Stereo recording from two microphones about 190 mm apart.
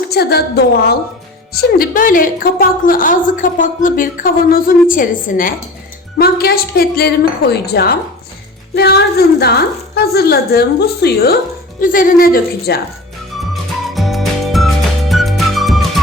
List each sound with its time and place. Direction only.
0.1 s a woman's voice: 55° left (ahead or behind)
13.4 s music: centre (ahead or behind)